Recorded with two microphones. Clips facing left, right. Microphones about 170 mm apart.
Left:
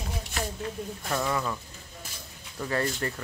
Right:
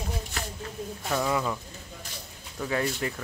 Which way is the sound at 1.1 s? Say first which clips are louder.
Right 2 dB; 5° right (ahead or behind).